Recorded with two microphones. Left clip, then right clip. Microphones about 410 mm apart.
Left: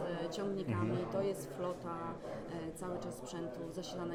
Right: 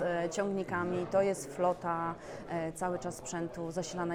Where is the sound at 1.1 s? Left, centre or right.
Right.